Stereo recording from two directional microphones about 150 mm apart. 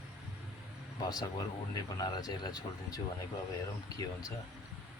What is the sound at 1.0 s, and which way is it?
Speech, 25° left (ahead or behind).